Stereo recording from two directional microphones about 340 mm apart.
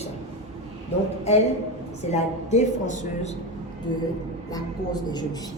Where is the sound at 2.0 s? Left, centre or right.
Centre.